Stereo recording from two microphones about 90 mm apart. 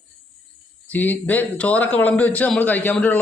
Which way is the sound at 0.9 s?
20° left (ahead or behind).